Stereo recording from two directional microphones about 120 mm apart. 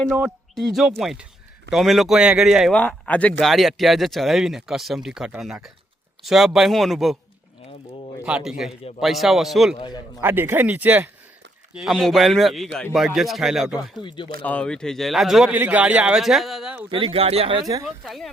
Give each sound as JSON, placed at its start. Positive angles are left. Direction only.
{"t": 0.1, "sound": "speech", "side_deg": 0}
{"t": 2.7, "sound": "speech", "side_deg": 10}
{"t": 3.4, "sound": "speech", "side_deg": 0}
{"t": 8.2, "sound": "speech", "side_deg": -5}
{"t": 9.7, "sound": "a man's voice", "side_deg": 40}
{"t": 10.2, "sound": "speech", "side_deg": -20}
{"t": 14.4, "sound": "speech", "side_deg": 10}
{"t": 15.5, "sound": "speech", "side_deg": -10}
{"t": 16.9, "sound": "speech", "side_deg": -50}
{"t": 17.8, "sound": "speech", "side_deg": 0}